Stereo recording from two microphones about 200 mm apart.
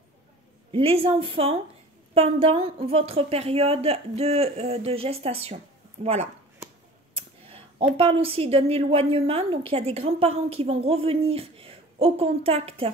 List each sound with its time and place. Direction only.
0.7 s a woman's voice: 30° right (ahead or behind)
7.2 s clicking: 30° right (ahead or behind)
8.0 s a woman's voice: 30° right (ahead or behind)